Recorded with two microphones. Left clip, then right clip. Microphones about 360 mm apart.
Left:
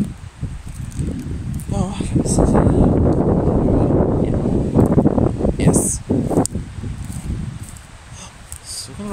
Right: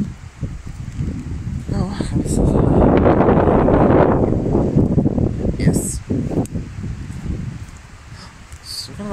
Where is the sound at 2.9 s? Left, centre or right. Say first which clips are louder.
Right 5 dB; right.